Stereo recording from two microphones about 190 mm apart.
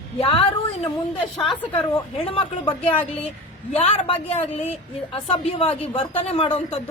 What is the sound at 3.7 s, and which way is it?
A woman's voice, 30° left (ahead or behind).